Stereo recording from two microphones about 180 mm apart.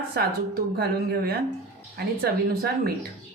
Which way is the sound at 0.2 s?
55° right (ahead or behind).